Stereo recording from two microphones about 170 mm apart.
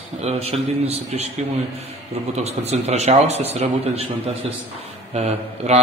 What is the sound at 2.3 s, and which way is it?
A man's voice, 40° right (ahead or behind).